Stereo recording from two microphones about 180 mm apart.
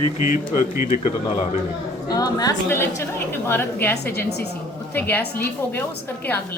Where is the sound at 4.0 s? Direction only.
65° left (ahead or behind).